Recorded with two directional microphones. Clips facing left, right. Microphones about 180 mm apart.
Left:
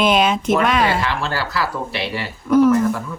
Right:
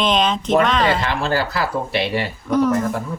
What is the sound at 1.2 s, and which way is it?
Speech, 20° right (ahead or behind).